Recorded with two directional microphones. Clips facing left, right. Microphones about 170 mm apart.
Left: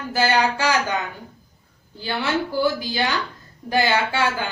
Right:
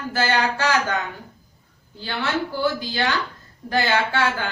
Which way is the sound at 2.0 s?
15° left (ahead or behind).